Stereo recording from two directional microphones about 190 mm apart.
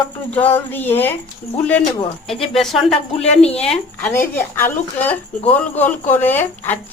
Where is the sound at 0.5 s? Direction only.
10° left (ahead or behind).